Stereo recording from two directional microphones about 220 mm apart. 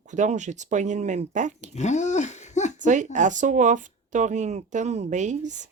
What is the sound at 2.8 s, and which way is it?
Speech, 35° right (ahead or behind).